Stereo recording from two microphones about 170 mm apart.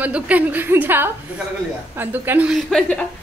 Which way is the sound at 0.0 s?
10° right (ahead or behind).